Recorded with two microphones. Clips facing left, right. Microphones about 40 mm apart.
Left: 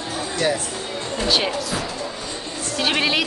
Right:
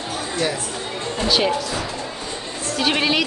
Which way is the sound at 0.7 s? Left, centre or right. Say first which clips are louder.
Right 1 dB; centre.